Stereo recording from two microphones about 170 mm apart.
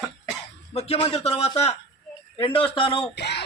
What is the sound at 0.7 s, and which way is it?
A man's voice, 35° left (ahead or behind).